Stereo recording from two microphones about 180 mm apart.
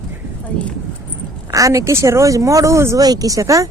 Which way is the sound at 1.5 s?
20° right (ahead or behind).